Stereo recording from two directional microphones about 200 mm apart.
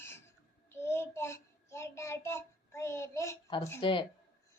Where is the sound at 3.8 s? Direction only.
25° left (ahead or behind).